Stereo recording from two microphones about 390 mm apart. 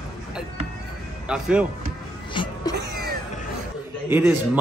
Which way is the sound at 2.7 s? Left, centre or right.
Right.